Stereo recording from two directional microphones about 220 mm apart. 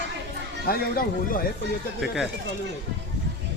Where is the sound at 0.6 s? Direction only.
40° left (ahead or behind).